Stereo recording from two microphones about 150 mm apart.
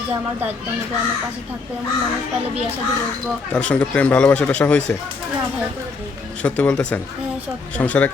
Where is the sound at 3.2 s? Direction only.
5° left (ahead or behind).